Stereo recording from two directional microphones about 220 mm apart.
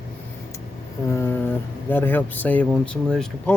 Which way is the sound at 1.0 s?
10° left (ahead or behind).